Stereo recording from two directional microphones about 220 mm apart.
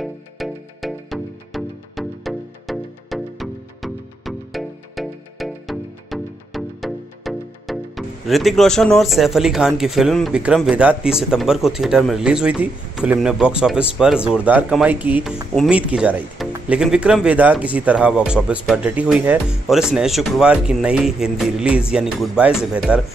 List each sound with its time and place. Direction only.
0.0 s music: centre (ahead or behind)
15.5 s speech: centre (ahead or behind)